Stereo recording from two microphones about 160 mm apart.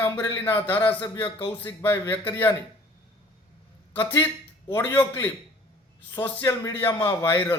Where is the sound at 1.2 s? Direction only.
25° left (ahead or behind).